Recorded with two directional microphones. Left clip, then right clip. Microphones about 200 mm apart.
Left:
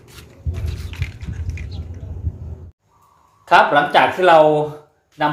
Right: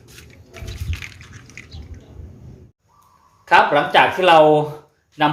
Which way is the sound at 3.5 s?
5° left (ahead or behind).